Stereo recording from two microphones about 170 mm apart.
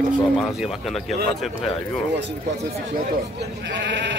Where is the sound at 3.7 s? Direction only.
90° right.